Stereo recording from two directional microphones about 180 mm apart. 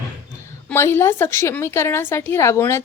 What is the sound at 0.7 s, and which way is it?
A woman's voice, 15° left (ahead or behind).